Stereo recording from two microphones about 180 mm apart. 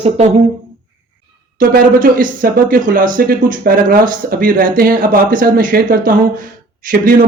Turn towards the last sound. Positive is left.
turn(degrees=-50)  # may be behind; listen again after turning